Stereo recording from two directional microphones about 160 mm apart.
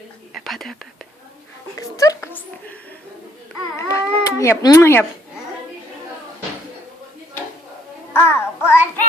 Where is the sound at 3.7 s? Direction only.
20° left (ahead or behind).